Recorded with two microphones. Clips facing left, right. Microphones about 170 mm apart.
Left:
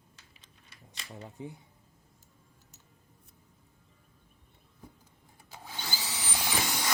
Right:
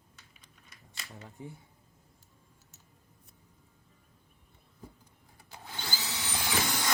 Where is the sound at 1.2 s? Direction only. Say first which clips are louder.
Left 4 dB; 20° left (ahead or behind).